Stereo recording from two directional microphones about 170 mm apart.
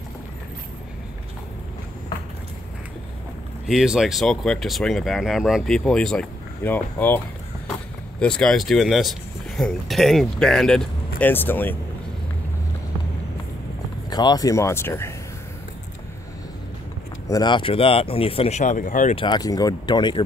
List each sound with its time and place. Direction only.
3.6 s speech: centre (ahead or behind)
8.2 s speech: 5° left (ahead or behind)
14.1 s speech: 25° left (ahead or behind)
17.3 s speech: 25° left (ahead or behind); by 19.1 s 50° left (ahead or behind)
19.1 s speech: 25° left (ahead or behind)